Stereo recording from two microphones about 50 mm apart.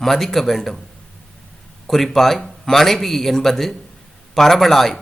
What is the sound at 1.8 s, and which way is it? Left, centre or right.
A man's voice, centre.